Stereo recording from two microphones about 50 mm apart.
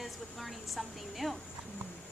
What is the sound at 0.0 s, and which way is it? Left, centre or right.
Speech, centre.